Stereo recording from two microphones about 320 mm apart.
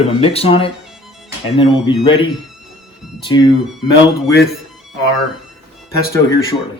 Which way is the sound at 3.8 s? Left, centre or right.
Centre.